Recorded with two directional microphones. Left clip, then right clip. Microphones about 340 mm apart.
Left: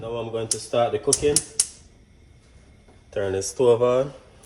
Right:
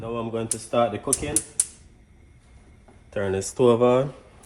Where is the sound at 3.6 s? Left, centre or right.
Right.